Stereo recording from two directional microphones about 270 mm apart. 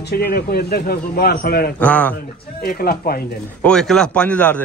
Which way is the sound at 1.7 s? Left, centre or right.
Centre.